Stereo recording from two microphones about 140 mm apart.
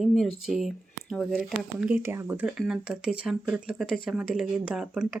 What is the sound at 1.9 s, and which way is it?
Speech, 15° right (ahead or behind).